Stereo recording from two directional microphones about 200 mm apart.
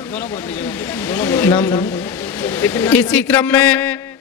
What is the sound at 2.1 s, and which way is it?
A man's voice, 10° left (ahead or behind).